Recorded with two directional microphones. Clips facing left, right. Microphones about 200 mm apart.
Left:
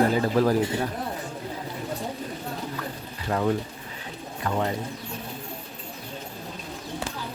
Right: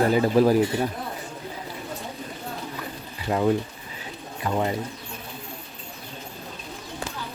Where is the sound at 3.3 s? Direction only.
15° right (ahead or behind).